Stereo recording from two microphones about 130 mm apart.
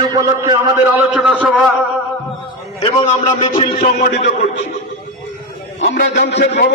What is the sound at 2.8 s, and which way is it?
Music, 55° left (ahead or behind).